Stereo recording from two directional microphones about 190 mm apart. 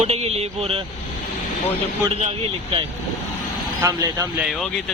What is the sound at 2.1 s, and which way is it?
Speech, 35° right (ahead or behind).